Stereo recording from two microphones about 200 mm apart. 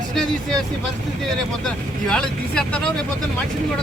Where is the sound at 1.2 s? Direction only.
Centre (ahead or behind).